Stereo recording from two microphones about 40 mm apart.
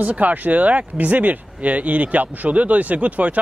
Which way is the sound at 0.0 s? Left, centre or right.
Right.